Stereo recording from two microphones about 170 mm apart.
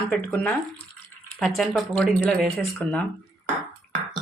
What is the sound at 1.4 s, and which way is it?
A woman's voice, centre (ahead or behind).